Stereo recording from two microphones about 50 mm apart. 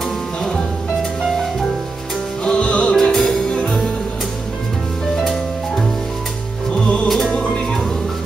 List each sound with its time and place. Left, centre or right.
0.4 s music: centre
2.4 s music: left
5.2 s music: centre
6.7 s music: left
7.1 s music: centre